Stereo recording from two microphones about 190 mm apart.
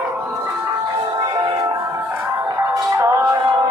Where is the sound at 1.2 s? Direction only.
20° right (ahead or behind).